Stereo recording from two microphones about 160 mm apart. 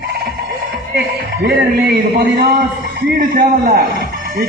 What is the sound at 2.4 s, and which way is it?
A man's voice, 60° right (ahead or behind).